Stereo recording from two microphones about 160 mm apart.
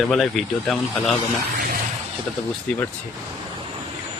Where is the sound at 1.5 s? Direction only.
60° right (ahead or behind).